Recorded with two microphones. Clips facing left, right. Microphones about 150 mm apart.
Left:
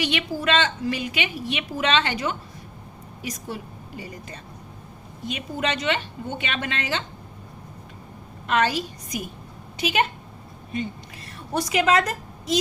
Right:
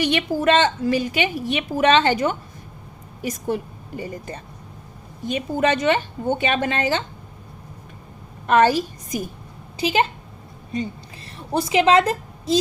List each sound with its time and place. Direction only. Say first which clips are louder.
0.0 s a woman's voice: right 6 dB; 45° right (ahead or behind)
5.5 s a woman's voice: right 6 dB; 45° right (ahead or behind)
8.4 s a woman's voice: right 6 dB; 45° right (ahead or behind)
9.7 s a woman's voice: right 3 dB; 30° right (ahead or behind)
11.5 s a woman's voice: right 4 dB; 25° right (ahead or behind)